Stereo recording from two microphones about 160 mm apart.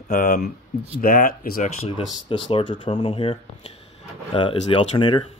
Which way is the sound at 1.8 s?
40° left (ahead or behind).